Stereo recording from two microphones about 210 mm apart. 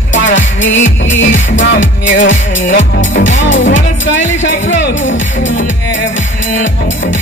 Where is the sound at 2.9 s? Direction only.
60° left (ahead or behind).